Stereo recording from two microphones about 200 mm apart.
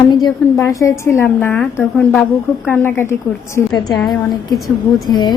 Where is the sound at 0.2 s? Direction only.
15° left (ahead or behind).